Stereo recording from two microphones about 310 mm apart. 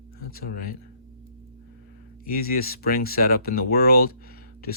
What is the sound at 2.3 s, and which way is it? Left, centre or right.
Speech, left.